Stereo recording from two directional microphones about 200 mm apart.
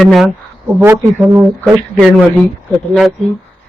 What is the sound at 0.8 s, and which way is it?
Speech, 10° right (ahead or behind).